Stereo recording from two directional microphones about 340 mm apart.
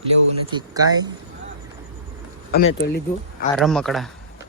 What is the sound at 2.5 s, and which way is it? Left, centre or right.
Speech, left.